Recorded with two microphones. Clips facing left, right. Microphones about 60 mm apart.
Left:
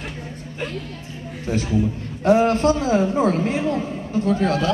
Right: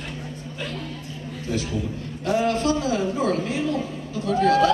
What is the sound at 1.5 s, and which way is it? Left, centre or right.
A man's voice, left.